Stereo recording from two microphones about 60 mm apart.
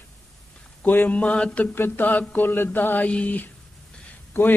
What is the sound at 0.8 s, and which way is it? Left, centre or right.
Mantra, left.